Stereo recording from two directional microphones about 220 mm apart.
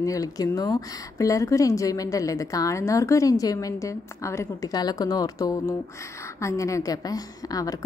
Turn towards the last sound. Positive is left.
turn(degrees=15)  # may be behind; listen again after turning